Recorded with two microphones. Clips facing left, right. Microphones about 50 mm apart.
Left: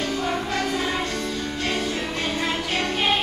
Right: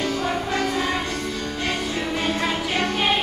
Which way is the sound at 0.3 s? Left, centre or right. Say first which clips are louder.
Right 1 dB; centre.